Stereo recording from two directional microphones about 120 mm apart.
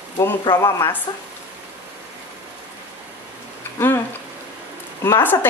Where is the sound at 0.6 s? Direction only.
25° left (ahead or behind).